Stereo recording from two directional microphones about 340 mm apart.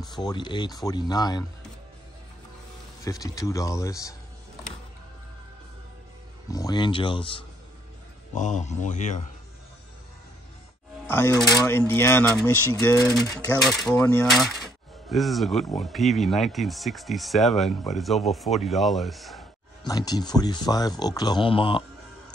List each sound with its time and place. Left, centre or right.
0.1 s speech: centre
3.0 s speech: centre
6.5 s a man's voice: centre
11.1 s speech: centre
19.8 s speech: centre